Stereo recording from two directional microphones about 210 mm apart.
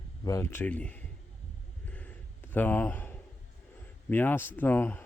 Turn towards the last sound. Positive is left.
turn(degrees=10)  # may be behind; listen again after turning